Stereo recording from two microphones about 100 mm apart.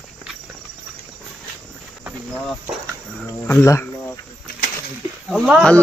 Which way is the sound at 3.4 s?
20° left (ahead or behind).